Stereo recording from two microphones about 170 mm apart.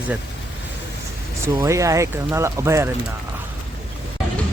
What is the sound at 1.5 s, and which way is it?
A man's voice, 20° right (ahead or behind).